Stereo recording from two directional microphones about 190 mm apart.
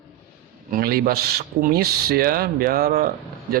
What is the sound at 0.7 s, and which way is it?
Speech, 50° right (ahead or behind).